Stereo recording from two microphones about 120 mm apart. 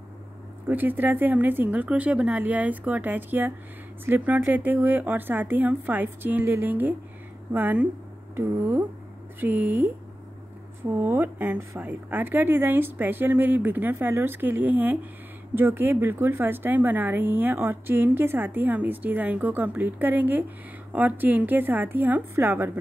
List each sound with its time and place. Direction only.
0.7 s a woman's voice: 15° right (ahead or behind)